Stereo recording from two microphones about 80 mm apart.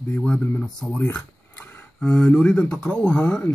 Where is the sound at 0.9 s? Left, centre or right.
Left.